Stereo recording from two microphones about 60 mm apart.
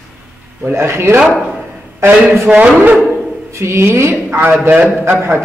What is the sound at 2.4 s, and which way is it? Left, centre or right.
Speech, right.